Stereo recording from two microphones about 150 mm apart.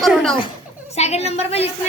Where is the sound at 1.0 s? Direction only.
45° left (ahead or behind).